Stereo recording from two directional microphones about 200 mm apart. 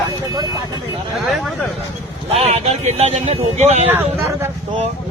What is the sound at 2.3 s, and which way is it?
Speech, 30° right (ahead or behind).